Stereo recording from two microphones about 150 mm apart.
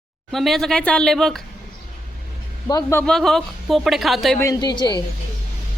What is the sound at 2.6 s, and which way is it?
Speech, 25° left (ahead or behind).